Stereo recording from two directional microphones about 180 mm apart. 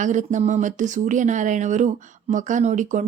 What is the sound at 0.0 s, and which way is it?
Speech, 45° right (ahead or behind).